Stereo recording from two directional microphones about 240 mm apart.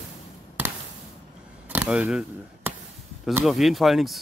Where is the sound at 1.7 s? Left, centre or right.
Centre.